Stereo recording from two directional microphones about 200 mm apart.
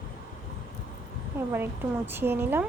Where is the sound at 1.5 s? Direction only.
10° right (ahead or behind).